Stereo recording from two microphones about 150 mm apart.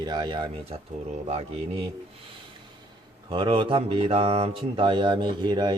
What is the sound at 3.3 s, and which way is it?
Mantra, 35° right (ahead or behind).